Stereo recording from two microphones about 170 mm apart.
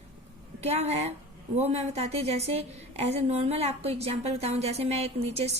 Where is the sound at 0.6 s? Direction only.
40° right (ahead or behind).